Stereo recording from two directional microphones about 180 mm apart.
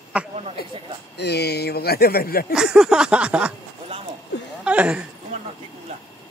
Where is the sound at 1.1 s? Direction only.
65° left (ahead or behind).